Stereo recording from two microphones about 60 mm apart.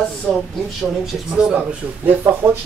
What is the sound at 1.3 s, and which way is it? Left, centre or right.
Speech, centre.